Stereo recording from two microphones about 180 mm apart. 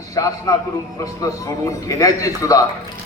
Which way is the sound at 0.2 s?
20° left (ahead or behind).